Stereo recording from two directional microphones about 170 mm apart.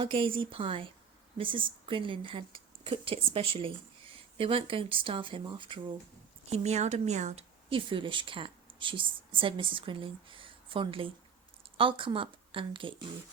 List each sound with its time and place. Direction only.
0.0 s a woman's voice: 30° right (ahead or behind)
6.5 s a woman's voice: 40° right (ahead or behind)